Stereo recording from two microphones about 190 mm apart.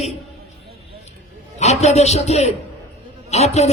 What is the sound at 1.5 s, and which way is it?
A man's voice, 35° left (ahead or behind).